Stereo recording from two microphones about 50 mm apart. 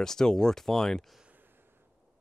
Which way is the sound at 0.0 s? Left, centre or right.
Centre.